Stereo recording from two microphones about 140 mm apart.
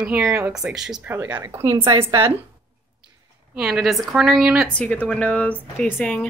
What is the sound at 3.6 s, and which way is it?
Speech, centre (ahead or behind).